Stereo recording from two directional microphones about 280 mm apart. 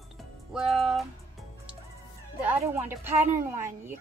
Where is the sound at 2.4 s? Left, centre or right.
Centre.